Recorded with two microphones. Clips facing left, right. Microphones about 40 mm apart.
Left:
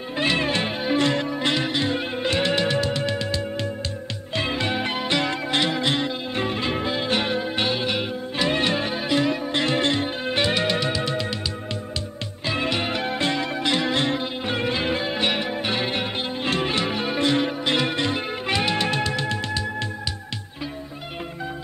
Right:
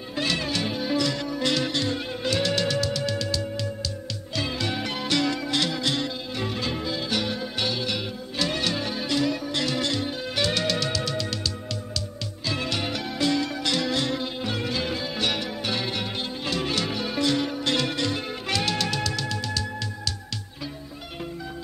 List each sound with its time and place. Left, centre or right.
0.2 s music: left
1.5 s music: left
4.4 s music: left
12.4 s music: left